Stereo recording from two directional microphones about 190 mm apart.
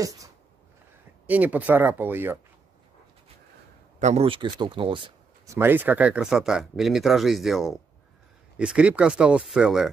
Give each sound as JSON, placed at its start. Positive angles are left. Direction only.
{"t": 1.2, "sound": "speech", "side_deg": -10}
{"t": 4.0, "sound": "speech", "side_deg": -35}
{"t": 5.6, "sound": "speech", "side_deg": -10}